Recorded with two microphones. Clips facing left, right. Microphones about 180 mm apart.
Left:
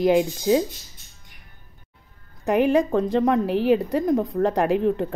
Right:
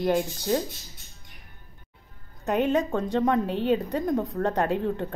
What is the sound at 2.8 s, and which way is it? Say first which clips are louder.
Speech: left 4 dB; 5° left (ahead or behind).